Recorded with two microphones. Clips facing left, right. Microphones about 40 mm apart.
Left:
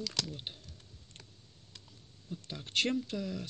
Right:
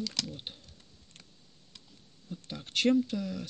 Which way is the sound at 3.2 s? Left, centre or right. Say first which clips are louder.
Right 2 dB; centre.